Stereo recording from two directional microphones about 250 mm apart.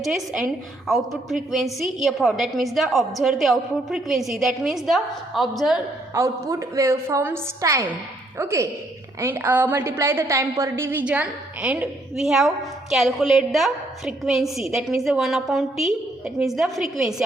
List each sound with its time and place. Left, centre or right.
0.0 s a woman's voice: centre
6.1 s a woman's voice: centre